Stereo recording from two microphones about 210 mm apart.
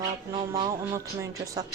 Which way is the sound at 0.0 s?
20° right (ahead or behind).